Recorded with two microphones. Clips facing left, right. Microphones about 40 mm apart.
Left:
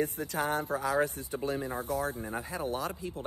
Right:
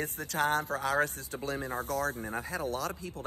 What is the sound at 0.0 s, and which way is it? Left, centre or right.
Speech, right.